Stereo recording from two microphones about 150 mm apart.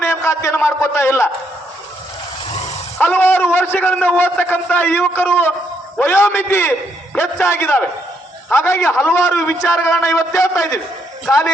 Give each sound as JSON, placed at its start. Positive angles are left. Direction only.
{"t": 0.0, "sound": "a man's voice", "side_deg": 15}
{"t": 3.0, "sound": "a man's voice", "side_deg": 10}